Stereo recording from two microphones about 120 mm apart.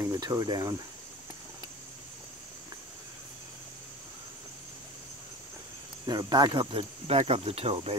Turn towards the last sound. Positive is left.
turn(degrees=-55)  # may be behind; listen again after turning